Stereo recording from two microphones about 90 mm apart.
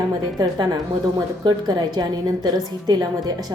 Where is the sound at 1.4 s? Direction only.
50° right (ahead or behind).